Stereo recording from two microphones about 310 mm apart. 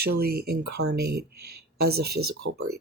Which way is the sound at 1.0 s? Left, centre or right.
Right.